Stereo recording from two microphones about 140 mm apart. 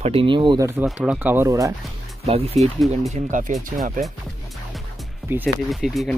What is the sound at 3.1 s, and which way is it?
Speech, 60° right (ahead or behind).